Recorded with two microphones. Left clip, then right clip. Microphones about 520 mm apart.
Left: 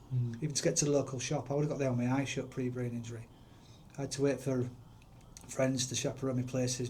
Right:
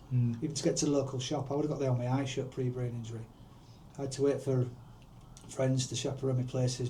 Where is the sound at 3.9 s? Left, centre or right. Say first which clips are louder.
Right 2 dB; left.